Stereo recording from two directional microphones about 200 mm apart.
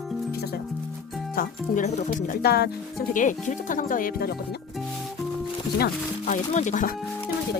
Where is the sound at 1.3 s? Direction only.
40° left (ahead or behind).